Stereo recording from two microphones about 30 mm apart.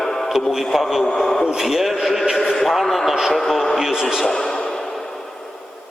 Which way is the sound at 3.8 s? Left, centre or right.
Centre.